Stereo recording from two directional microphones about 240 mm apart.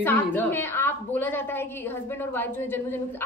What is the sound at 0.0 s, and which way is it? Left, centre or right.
A woman's voice, centre.